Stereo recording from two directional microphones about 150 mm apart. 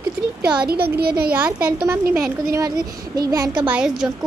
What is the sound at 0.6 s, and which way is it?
Speech, 90° right.